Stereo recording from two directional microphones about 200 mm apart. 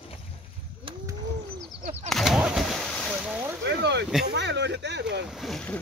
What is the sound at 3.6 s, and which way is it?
Boat, 60° right (ahead or behind).